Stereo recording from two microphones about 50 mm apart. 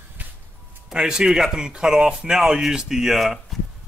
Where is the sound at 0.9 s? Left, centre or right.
Centre.